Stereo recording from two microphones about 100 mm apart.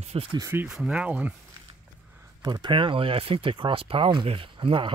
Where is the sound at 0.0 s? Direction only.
90° right.